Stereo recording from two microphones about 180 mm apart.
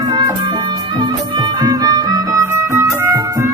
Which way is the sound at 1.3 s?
20° right (ahead or behind).